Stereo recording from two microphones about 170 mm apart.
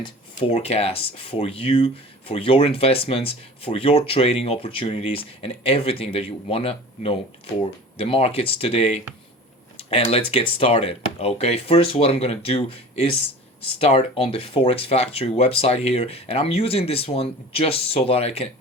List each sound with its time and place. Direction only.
0.0 s speech: 35° left (ahead or behind)